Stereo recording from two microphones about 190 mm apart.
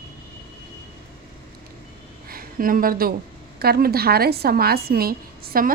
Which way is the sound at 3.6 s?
55° right (ahead or behind).